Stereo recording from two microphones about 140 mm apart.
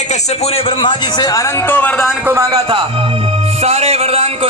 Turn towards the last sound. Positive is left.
turn(degrees=-45)  # may be behind; listen again after turning